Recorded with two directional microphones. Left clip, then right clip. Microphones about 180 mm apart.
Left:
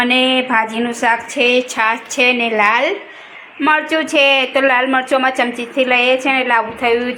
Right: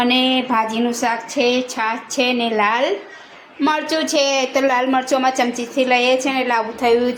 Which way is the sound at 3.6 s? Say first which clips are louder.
Left 4 dB; 15° right (ahead or behind).